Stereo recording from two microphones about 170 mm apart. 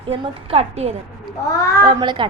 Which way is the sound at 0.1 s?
35° right (ahead or behind).